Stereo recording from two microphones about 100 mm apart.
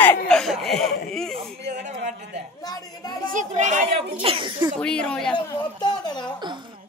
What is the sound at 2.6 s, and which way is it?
Speech, 45° left (ahead or behind).